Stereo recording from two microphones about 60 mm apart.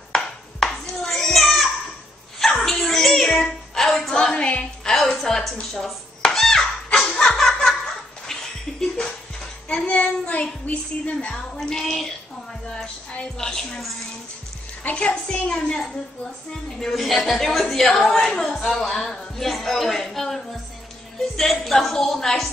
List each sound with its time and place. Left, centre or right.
0.1 s a sound: centre
2.6 s dog: centre
3.3 s a sound: centre
4.2 s music: centre
5.2 s dishes: centre
6.9 s laughter: centre
8.3 s music: centre
9.7 s child singing: centre
12.7 s a woman's voice: centre
14.8 s a woman's voice: left
16.8 s a woman's voice: centre